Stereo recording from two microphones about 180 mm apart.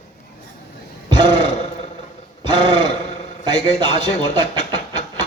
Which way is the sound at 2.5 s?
25° right (ahead or behind).